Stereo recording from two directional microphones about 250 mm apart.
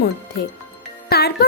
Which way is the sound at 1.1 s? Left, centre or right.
Left.